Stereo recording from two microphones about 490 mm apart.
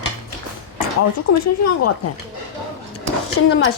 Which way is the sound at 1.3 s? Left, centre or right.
Left.